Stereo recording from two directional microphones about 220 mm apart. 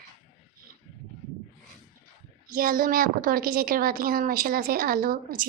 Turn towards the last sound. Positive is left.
turn(degrees=-40)  # may be behind; listen again after turning